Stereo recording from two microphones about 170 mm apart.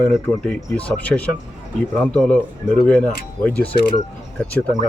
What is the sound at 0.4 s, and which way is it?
Speech, 5° left (ahead or behind).